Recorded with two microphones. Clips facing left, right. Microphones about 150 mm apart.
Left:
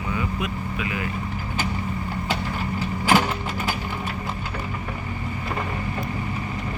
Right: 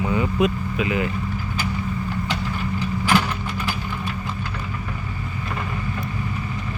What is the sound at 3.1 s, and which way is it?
Vehicle, 40° left (ahead or behind).